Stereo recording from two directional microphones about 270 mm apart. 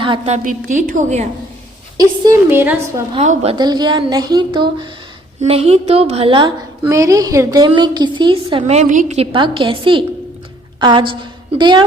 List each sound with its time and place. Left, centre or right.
0.0 s a woman's voice: right
2.0 s a woman's voice: centre
3.2 s a woman's voice: right